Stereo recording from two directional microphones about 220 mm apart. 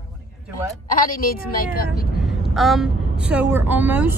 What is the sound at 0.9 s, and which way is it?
A woman's voice, 40° left (ahead or behind).